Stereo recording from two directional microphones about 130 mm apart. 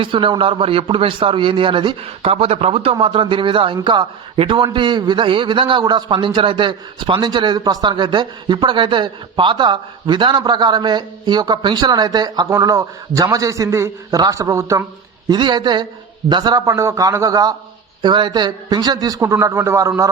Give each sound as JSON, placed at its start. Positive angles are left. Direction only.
{"t": 0.0, "sound": "a man's voice", "side_deg": -40}
{"t": 15.3, "sound": "a man's voice", "side_deg": -35}